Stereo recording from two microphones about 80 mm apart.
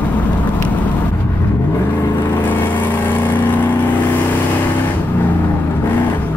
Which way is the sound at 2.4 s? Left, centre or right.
Left.